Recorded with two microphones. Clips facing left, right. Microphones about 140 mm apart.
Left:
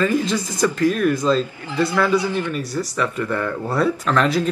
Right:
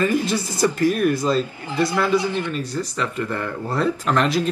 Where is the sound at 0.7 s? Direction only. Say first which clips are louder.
Even; 10° right (ahead or behind).